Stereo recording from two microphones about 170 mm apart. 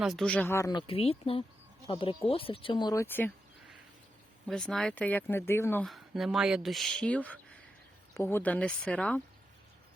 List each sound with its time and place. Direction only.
0.0 s speech: centre (ahead or behind)
4.4 s speech: 5° left (ahead or behind)
5.8 s speech: centre (ahead or behind)